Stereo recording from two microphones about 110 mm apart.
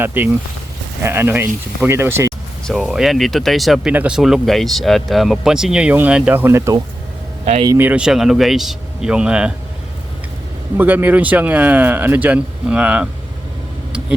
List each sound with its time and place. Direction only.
0.0 s speech: 15° right (ahead or behind)
2.6 s speech: centre (ahead or behind); by 6.7 s 20° right (ahead or behind)
7.8 s speech: 10° right (ahead or behind)
10.8 s speech: 15° right (ahead or behind)